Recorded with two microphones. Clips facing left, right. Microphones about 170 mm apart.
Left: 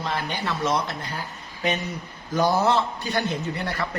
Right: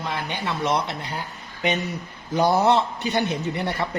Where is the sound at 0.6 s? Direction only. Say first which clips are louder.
Right 1 dB; 20° right (ahead or behind).